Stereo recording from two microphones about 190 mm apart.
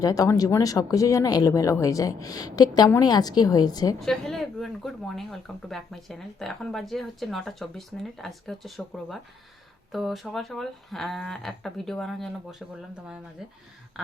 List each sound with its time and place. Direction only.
0.0 s speech: 20° left (ahead or behind)
4.0 s speech: centre (ahead or behind)